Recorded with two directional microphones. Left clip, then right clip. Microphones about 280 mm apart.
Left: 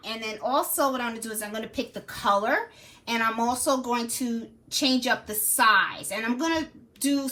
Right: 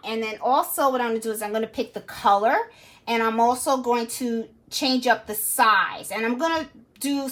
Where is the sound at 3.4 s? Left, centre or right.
Centre.